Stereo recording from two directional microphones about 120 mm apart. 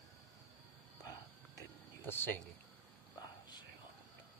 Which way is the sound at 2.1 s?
15° left (ahead or behind).